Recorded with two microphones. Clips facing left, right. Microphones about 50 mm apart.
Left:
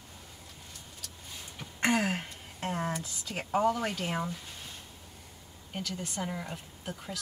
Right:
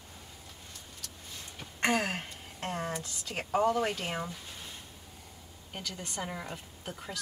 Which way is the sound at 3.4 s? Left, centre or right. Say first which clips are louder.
Even; centre.